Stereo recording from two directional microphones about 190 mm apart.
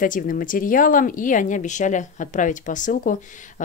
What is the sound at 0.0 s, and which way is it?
Speech, 45° left (ahead or behind).